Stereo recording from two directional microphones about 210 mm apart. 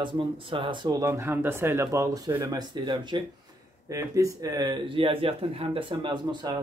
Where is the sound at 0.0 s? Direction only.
25° right (ahead or behind).